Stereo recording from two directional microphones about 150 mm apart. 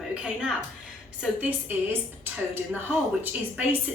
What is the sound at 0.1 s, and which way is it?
A woman's voice, 5° right (ahead or behind).